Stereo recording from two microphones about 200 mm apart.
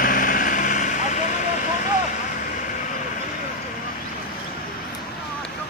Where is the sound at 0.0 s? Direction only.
45° left (ahead or behind).